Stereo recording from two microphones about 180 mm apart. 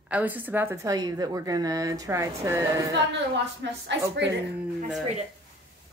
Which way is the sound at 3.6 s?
80° right.